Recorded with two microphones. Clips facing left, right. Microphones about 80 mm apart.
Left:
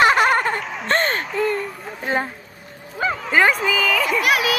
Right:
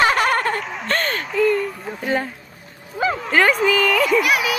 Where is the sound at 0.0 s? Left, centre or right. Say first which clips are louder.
Left 2 dB; centre.